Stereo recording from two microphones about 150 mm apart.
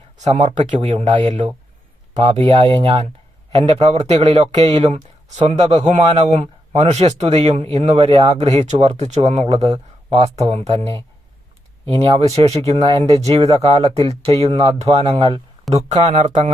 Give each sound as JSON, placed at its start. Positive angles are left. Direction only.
{"t": 0.3, "sound": "speech", "side_deg": -45}
{"t": 11.9, "sound": "speech", "side_deg": -35}